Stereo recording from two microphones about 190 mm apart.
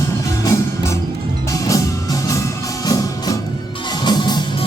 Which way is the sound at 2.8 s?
20° left (ahead or behind).